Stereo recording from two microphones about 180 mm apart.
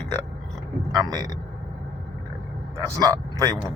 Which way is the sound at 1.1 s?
20° right (ahead or behind).